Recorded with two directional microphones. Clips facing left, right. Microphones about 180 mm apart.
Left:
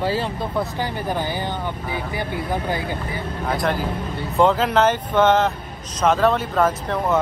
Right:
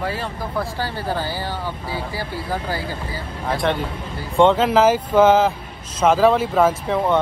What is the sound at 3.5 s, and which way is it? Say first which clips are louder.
A man's voice: right 1 dB; centre (ahead or behind).